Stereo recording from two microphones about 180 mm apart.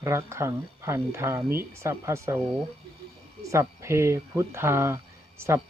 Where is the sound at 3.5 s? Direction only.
15° right (ahead or behind).